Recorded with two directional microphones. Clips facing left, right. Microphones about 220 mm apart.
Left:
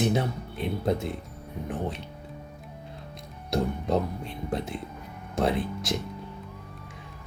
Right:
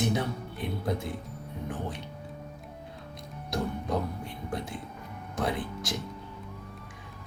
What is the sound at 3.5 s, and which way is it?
Music, 25° left (ahead or behind).